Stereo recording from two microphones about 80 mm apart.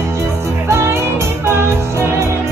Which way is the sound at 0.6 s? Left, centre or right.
Right.